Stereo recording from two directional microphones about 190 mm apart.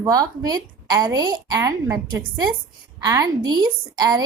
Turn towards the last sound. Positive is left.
turn(degrees=-20)  # may be behind; listen again after turning